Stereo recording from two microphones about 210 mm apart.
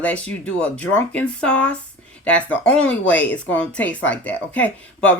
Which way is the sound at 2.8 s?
65° left (ahead or behind).